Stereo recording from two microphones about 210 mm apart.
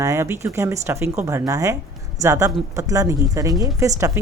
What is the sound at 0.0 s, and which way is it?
Speech, 15° right (ahead or behind).